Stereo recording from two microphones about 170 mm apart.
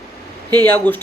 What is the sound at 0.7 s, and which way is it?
Speech, 10° left (ahead or behind).